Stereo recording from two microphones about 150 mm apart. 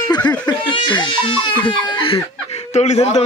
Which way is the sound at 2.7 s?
50° left (ahead or behind).